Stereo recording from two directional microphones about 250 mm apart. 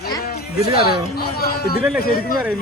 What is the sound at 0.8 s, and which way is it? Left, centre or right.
Speech, left.